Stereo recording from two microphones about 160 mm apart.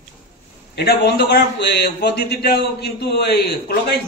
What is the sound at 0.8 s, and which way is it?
A man's voice, 90° left.